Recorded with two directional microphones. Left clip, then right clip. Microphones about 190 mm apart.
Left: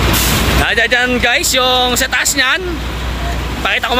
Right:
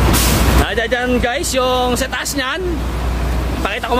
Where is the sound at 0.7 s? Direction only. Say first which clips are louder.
Left 5 dB; 15° right (ahead or behind).